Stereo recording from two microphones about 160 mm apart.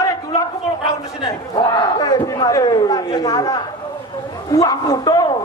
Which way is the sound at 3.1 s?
20° left (ahead or behind).